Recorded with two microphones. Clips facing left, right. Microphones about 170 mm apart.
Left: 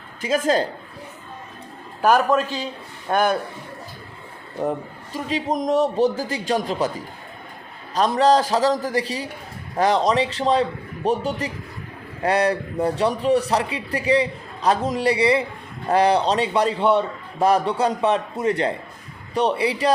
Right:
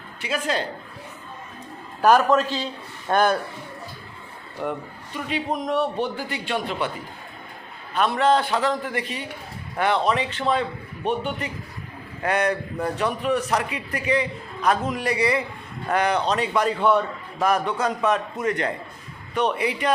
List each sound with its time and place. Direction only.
0.2 s speech: 45° left (ahead or behind)
2.0 s a man's voice: 15° left (ahead or behind)
4.6 s a man's voice: 35° left (ahead or behind)
7.9 s a man's voice: 35° left (ahead or behind)